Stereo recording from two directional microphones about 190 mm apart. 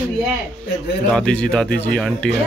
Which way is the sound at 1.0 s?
5° left (ahead or behind).